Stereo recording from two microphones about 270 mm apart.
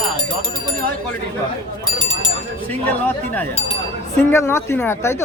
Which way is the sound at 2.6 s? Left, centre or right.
Centre.